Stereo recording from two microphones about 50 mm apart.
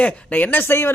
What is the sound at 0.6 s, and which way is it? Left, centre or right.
Speech, left.